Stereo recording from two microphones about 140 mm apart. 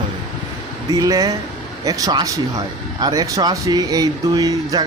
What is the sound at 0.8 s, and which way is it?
Speech, 25° right (ahead or behind).